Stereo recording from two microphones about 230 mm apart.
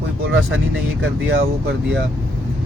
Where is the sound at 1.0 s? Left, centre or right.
Right.